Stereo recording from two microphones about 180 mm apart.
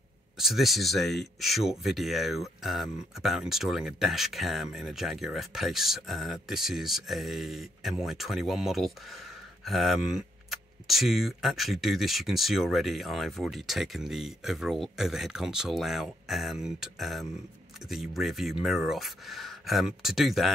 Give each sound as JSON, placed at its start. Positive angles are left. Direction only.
{"t": 0.4, "sound": "speech", "side_deg": 0}